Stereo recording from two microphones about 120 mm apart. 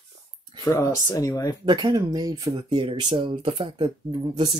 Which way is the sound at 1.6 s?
35° right (ahead or behind).